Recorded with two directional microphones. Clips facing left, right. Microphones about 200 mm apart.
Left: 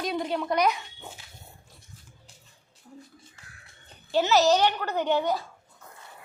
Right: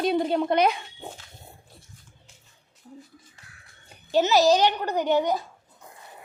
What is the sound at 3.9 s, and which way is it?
A child's voice, 15° right (ahead or behind).